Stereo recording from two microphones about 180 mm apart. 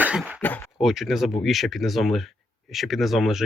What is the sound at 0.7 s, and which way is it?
Speech, centre (ahead or behind).